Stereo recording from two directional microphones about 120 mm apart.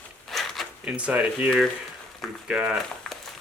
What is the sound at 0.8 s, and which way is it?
Speech, 10° right (ahead or behind).